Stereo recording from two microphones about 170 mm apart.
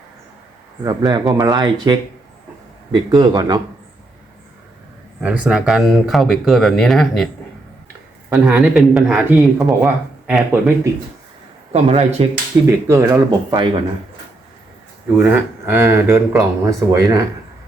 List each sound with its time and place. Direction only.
0.9 s speech: 25° right (ahead or behind)
5.2 s speech: 5° right (ahead or behind)
8.3 s speech: 5° right (ahead or behind)
11.7 s speech: 40° right (ahead or behind)
12.9 s speech: 15° right (ahead or behind)
15.2 s speech: 15° right (ahead or behind)